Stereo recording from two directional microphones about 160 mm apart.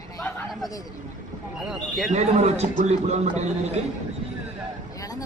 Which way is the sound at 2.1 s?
45° right (ahead or behind).